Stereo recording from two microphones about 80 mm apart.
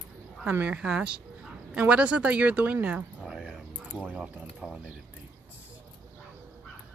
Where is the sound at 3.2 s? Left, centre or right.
Centre.